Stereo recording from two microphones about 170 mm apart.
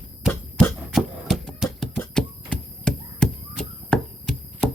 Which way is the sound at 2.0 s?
5° left (ahead or behind).